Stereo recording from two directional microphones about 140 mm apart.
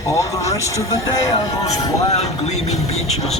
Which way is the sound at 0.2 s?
20° left (ahead or behind).